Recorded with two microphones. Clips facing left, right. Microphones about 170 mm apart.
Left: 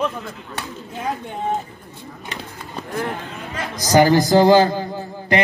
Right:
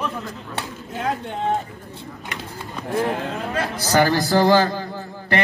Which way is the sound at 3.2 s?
60° right (ahead or behind).